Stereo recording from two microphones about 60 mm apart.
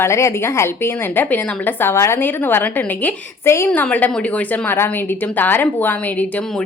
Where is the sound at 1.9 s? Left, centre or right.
Left.